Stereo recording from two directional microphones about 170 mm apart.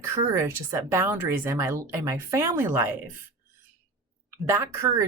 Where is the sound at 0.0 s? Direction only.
15° right (ahead or behind).